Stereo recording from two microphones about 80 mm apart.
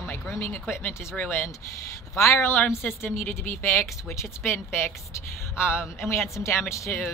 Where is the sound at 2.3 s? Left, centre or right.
Left.